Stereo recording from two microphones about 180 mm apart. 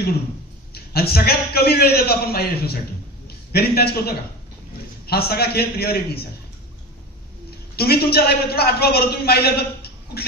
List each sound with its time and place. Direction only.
0.7 s a man's voice: 60° left (ahead or behind)
7.7 s a man's voice: 60° left (ahead or behind)